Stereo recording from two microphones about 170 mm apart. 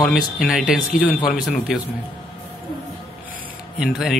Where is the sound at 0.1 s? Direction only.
Centre (ahead or behind).